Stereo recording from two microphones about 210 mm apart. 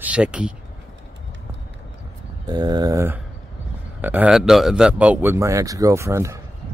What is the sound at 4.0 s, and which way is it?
Speech, 10° right (ahead or behind).